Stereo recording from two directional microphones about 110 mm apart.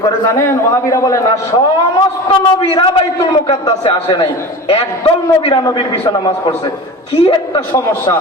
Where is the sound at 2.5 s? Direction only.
55° left (ahead or behind).